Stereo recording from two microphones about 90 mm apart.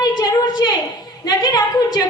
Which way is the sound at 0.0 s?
55° left (ahead or behind).